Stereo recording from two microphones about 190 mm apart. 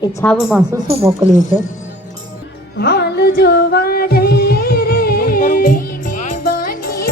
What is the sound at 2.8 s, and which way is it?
Music, 60° left (ahead or behind).